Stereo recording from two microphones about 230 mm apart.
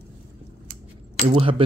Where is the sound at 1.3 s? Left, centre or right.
Right.